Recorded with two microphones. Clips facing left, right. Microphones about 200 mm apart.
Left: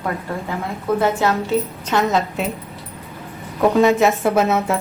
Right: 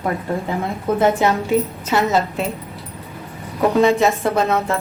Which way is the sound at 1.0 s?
15° right (ahead or behind).